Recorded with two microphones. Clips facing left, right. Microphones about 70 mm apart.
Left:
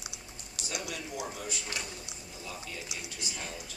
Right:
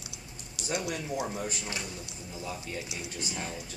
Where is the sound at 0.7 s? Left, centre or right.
Right.